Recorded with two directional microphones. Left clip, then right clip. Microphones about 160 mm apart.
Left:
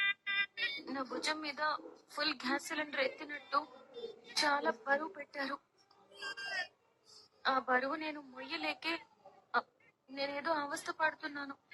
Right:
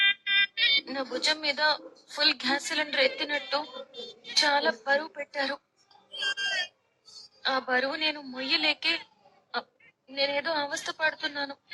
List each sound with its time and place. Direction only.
0.0 s speech: 35° right (ahead or behind)
6.1 s pig: 35° right (ahead or behind)
7.4 s a woman's voice: 35° right (ahead or behind)